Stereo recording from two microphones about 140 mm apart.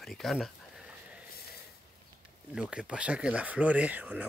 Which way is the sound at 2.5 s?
5° right (ahead or behind).